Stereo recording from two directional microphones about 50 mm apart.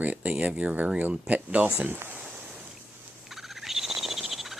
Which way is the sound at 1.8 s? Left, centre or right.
Right.